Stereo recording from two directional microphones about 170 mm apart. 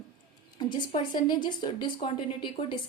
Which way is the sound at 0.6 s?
25° left (ahead or behind).